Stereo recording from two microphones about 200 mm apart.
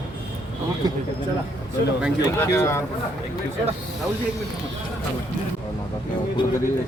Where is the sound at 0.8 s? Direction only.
20° right (ahead or behind).